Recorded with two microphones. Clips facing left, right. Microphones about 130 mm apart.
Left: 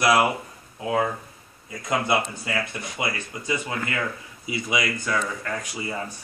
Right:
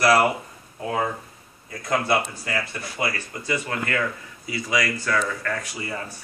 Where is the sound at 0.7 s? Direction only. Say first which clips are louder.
Left 2 dB; 5° left (ahead or behind).